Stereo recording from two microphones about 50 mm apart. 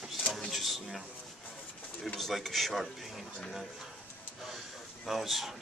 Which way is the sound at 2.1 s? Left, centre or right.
Centre.